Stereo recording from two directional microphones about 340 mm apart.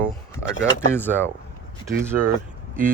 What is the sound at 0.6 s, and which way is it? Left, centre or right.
Speech, centre.